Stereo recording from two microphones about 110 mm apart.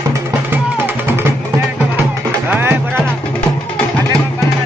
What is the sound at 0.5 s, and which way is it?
Music, 20° right (ahead or behind).